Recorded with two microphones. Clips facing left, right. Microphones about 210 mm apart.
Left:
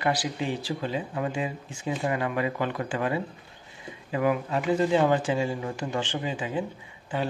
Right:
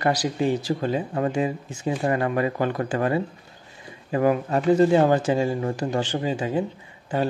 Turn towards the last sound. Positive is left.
turn(degrees=-40)  # may be behind; listen again after turning